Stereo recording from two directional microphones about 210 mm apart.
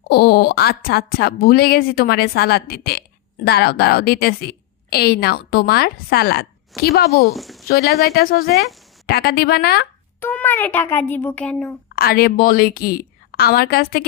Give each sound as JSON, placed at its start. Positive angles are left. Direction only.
{"t": 0.1, "sound": "a woman's voice", "side_deg": 50}
{"t": 7.3, "sound": "speech", "side_deg": 0}
{"t": 7.7, "sound": "a woman's voice", "side_deg": 45}
{"t": 10.2, "sound": "a child's voice", "side_deg": 10}
{"t": 11.9, "sound": "a woman's voice", "side_deg": 45}